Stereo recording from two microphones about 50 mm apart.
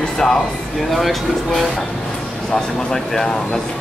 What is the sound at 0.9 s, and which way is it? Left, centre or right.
Speech, centre.